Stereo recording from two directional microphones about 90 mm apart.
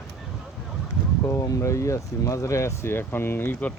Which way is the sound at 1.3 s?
35° left (ahead or behind).